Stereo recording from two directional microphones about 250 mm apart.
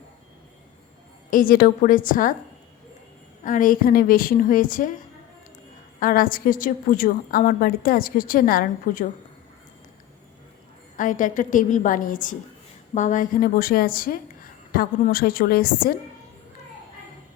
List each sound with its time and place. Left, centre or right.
1.3 s a woman's voice: left
3.4 s a woman's voice: left
6.0 s a woman's voice: left
10.9 s a woman's voice: left